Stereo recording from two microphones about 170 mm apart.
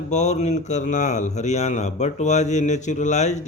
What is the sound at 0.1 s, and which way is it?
A man's voice, 45° left (ahead or behind).